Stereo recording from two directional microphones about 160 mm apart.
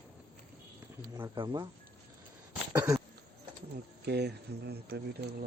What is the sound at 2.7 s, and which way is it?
Throat clearing, 20° right (ahead or behind).